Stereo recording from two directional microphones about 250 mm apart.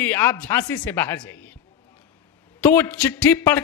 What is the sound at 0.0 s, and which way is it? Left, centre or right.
Speech, centre.